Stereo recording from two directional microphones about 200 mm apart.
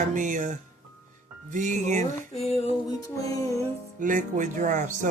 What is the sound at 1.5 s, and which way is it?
Speech, 40° right (ahead or behind).